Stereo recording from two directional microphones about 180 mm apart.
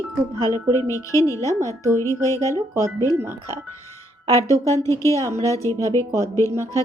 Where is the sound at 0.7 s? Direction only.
20° left (ahead or behind).